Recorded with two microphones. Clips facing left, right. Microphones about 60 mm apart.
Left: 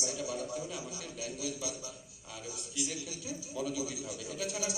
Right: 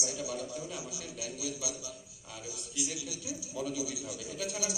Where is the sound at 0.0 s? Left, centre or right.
Centre.